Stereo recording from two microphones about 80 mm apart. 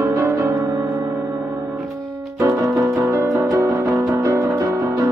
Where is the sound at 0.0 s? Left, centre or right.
Right.